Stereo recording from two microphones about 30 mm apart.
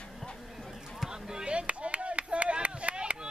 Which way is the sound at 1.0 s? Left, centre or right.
Right.